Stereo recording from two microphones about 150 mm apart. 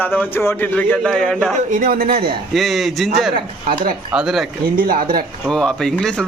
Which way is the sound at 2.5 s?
Centre (ahead or behind).